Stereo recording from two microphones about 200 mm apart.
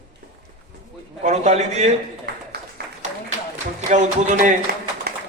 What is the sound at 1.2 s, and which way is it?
Speech, 35° right (ahead or behind).